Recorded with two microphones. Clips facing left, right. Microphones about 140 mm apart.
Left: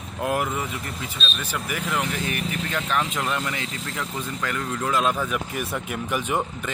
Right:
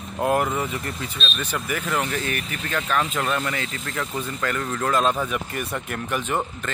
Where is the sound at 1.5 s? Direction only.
10° left (ahead or behind).